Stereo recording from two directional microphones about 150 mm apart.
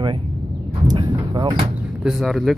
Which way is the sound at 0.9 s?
30° right (ahead or behind).